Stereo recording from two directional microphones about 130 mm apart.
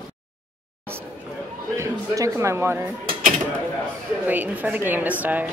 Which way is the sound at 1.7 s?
25° right (ahead or behind).